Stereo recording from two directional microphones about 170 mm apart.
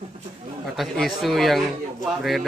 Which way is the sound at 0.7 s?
Centre (ahead or behind).